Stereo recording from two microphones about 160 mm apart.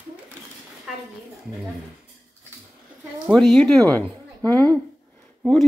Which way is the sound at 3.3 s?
5° left (ahead or behind).